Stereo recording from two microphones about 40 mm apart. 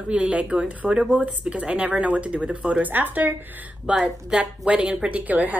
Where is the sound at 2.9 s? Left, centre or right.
Right.